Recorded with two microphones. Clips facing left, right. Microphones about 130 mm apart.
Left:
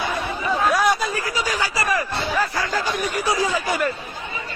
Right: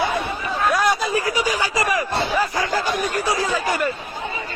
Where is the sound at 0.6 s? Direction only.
Centre (ahead or behind).